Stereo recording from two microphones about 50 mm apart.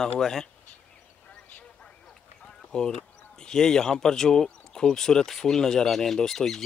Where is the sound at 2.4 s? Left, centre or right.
Centre.